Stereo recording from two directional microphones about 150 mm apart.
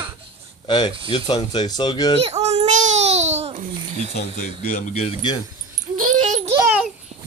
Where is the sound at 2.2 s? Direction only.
45° right (ahead or behind).